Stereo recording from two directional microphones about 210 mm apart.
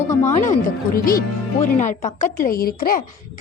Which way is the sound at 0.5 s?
45° left (ahead or behind).